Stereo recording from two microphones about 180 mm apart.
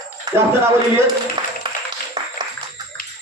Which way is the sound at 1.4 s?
25° right (ahead or behind).